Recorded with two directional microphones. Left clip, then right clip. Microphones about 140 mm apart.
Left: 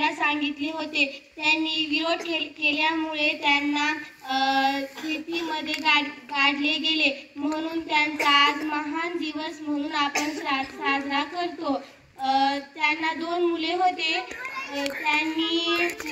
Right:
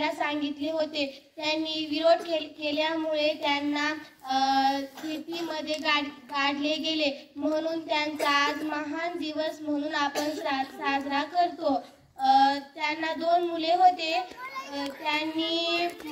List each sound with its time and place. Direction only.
0.0 s a woman's voice: 30° right (ahead or behind)